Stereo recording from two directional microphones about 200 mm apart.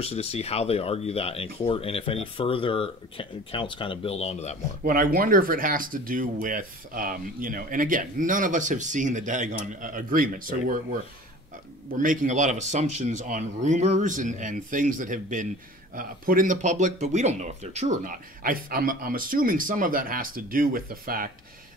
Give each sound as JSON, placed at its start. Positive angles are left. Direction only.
{"t": 0.0, "sound": "speech", "side_deg": 30}
{"t": 4.8, "sound": "speech", "side_deg": -45}